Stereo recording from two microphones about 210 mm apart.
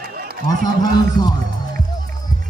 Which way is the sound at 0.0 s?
45° right (ahead or behind).